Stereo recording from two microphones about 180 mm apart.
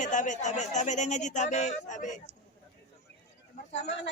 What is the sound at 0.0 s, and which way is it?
Speech, 45° left (ahead or behind).